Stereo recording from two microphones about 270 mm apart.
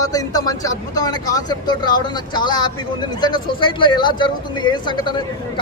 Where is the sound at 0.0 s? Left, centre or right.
Centre.